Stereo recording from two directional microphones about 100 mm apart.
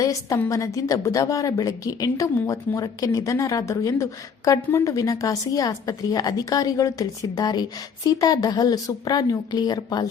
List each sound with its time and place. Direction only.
0.0 s a woman's voice: 35° left (ahead or behind)